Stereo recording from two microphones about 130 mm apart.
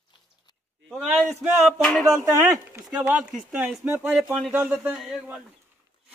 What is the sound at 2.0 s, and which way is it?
Speech, 25° right (ahead or behind).